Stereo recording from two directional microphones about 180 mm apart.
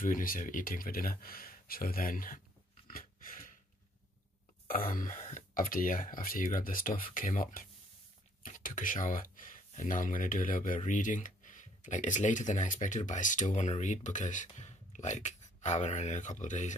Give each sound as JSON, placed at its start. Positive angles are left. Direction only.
{"t": 0.0, "sound": "speech", "side_deg": 50}
{"t": 2.9, "sound": "a sound", "side_deg": 50}
{"t": 4.6, "sound": "speech", "side_deg": 50}